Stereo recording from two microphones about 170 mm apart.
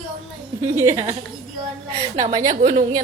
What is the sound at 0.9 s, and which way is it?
Music, 25° right (ahead or behind).